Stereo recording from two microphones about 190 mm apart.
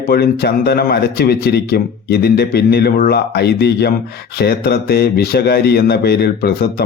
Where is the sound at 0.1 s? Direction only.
55° left (ahead or behind).